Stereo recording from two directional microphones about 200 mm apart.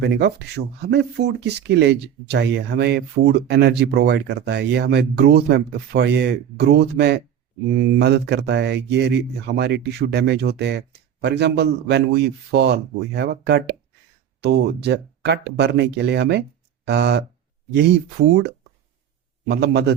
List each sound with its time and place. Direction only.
0.0 s speech: 55° right (ahead or behind)
19.5 s speech: 55° right (ahead or behind)